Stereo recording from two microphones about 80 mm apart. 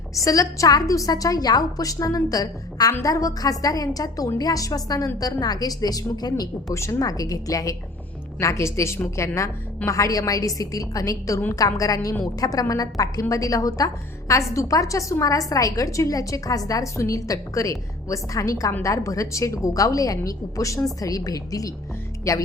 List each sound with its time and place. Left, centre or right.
0.1 s a woman's voice: left
6.7 s a woman's voice: left